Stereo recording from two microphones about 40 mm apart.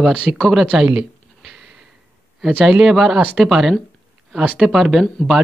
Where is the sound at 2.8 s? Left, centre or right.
Centre.